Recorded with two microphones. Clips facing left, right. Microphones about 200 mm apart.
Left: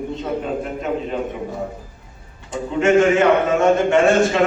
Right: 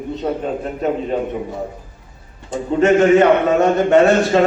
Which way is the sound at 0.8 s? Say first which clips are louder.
Right 4 dB; 40° right (ahead or behind).